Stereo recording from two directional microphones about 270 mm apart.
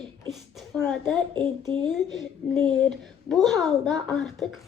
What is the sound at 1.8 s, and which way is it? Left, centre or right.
A child's voice, centre.